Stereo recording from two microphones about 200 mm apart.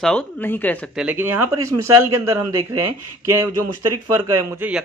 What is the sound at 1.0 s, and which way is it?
A man's voice, 10° right (ahead or behind).